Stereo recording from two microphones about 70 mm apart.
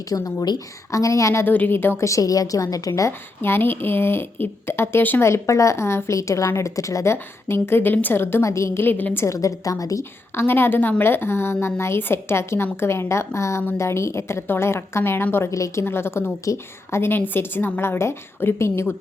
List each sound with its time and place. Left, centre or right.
0.1 s a woman's voice: left
0.9 s a woman's voice: left
1.5 s a woman's voice: left
2.0 s a woman's voice: left
3.1 s a woman's voice: left
5.3 s a woman's voice: left
8.8 s a woman's voice: left
9.2 s a woman's voice: left
10.0 s a woman's voice: left
15.4 s a woman's voice: left
16.4 s a woman's voice: left
17.0 s a woman's voice: left